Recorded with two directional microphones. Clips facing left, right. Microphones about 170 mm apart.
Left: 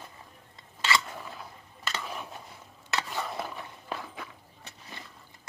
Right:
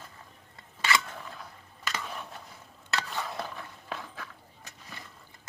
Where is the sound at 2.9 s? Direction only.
15° left (ahead or behind).